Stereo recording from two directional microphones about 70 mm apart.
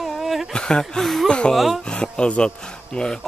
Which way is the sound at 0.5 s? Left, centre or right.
Centre.